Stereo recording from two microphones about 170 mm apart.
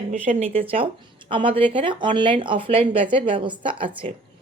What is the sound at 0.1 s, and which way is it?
Speech, 45° right (ahead or behind).